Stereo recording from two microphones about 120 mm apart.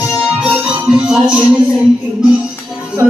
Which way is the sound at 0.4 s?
5° right (ahead or behind).